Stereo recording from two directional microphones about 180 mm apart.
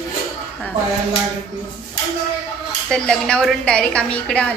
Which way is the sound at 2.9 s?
5° left (ahead or behind).